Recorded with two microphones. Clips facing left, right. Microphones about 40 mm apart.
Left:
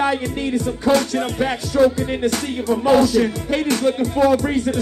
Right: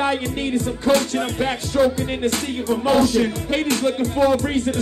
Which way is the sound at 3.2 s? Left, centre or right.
Right.